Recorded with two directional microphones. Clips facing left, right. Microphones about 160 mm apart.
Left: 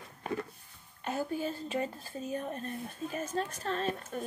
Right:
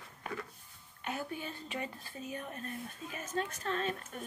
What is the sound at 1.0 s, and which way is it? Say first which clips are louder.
Speech: left 6 dB; 35° left (ahead or behind).